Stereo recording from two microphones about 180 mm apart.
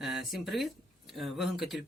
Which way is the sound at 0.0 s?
Centre (ahead or behind).